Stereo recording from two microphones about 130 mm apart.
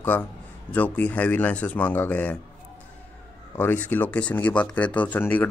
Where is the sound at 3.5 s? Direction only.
15° left (ahead or behind).